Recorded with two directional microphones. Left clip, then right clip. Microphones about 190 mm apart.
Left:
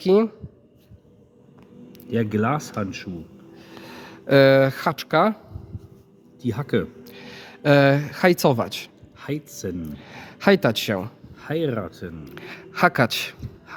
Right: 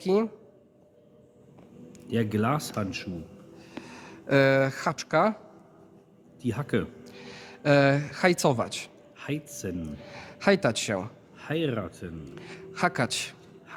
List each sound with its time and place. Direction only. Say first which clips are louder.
0.0 s speech: left 7 dB; 20° left (ahead or behind)
2.0 s speech: left 4 dB; 5° left (ahead or behind)
3.6 s speech: left 4 dB; 25° left (ahead or behind)
6.4 s speech: left 5 dB; 10° left (ahead or behind)